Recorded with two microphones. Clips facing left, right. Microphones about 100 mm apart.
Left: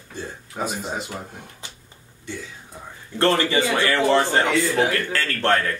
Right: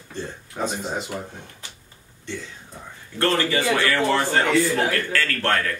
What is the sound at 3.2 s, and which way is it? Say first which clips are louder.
Speech: left 2 dB; 20° left (ahead or behind).